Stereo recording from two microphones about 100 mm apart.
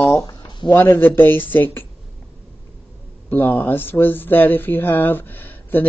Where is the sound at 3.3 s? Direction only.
20° left (ahead or behind).